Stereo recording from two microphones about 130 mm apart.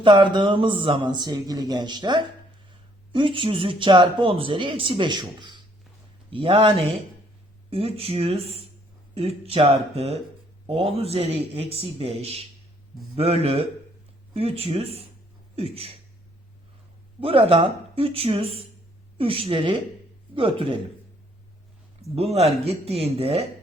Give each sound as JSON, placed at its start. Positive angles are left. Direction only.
{"t": 0.0, "sound": "speech", "side_deg": -40}
{"t": 6.3, "sound": "speech", "side_deg": -45}
{"t": 17.2, "sound": "speech", "side_deg": -45}
{"t": 22.1, "sound": "speech", "side_deg": -50}